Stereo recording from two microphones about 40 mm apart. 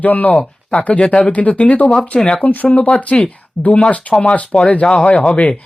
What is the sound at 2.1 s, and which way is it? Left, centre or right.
Speech, left.